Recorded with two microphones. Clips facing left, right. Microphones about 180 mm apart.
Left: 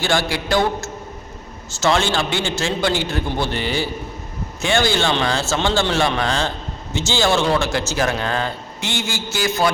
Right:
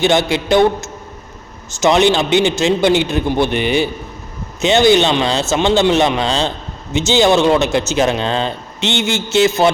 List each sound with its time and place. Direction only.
0.0 s speech: 20° right (ahead or behind)